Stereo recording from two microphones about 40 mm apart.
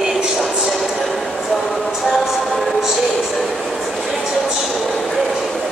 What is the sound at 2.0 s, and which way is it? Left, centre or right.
Speech, centre.